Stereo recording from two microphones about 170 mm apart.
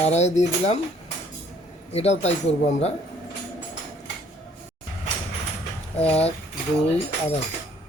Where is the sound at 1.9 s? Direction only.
40° left (ahead or behind).